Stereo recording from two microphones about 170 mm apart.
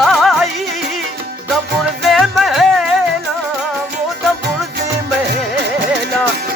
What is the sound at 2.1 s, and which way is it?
Music, centre (ahead or behind).